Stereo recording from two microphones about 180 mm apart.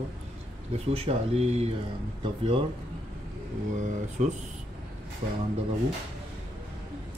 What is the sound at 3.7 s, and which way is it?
Speech, 45° right (ahead or behind).